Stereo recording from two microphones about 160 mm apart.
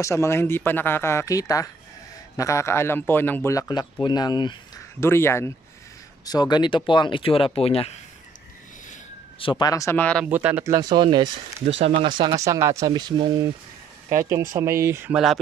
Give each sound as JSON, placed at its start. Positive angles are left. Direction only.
{"t": 0.0, "sound": "a man's voice", "side_deg": 15}
{"t": 5.0, "sound": "speech", "side_deg": 15}
{"t": 9.4, "sound": "a man's voice", "side_deg": 30}
{"t": 10.2, "sound": "speech", "side_deg": -10}
{"t": 15.1, "sound": "speech", "side_deg": 0}